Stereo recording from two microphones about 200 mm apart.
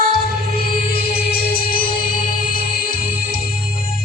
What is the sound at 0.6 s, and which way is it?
Music, 50° left (ahead or behind).